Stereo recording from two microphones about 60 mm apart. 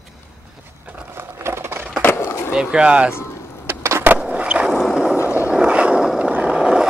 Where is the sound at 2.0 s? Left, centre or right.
Left.